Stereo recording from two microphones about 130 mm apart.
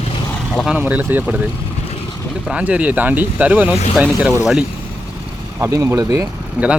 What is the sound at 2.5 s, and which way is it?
Speech, 10° right (ahead or behind).